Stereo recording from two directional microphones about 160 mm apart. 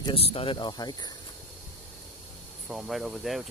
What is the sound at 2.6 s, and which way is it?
Speech, centre (ahead or behind).